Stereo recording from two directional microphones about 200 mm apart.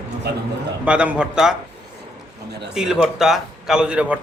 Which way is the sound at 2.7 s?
5° right (ahead or behind).